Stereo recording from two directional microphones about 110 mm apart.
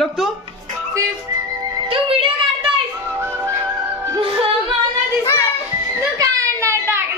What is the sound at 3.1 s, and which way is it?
Music, 20° right (ahead or behind).